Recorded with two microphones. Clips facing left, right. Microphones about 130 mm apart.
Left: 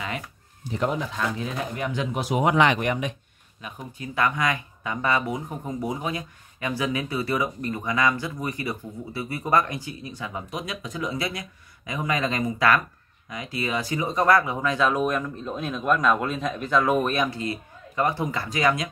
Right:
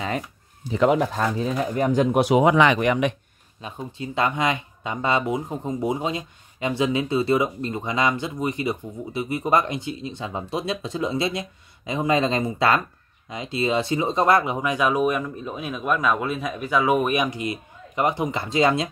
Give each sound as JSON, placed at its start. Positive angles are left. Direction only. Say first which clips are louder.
{"t": 1.0, "sound": "speech", "louder": "right 5 dB", "side_deg": -50}
{"t": 1.4, "sound": "speech", "louder": "right 6 dB", "side_deg": -35}
{"t": 2.1, "sound": "speech", "louder": "right 3 dB", "side_deg": -70}
{"t": 3.6, "sound": "speech", "louder": "right 4 dB", "side_deg": -25}